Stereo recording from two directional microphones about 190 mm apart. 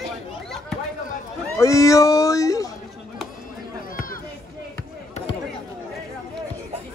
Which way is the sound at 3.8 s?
50° left (ahead or behind).